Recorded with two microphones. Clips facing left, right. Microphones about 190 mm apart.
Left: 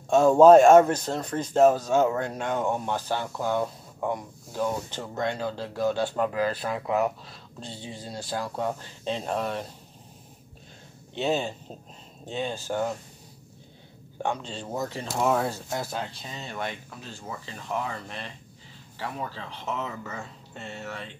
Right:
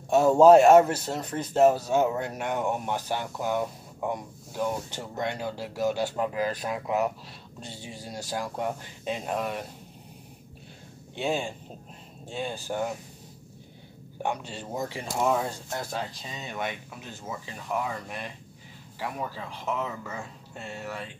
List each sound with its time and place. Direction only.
0.1 s speech: 15° right (ahead or behind)
7.7 s speech: 20° left (ahead or behind)
8.3 s speech: 15° right (ahead or behind)
11.1 s speech: 10° right (ahead or behind)
14.2 s speech: 15° right (ahead or behind)
15.2 s speech: 5° left (ahead or behind)
16.4 s speech: 15° right (ahead or behind)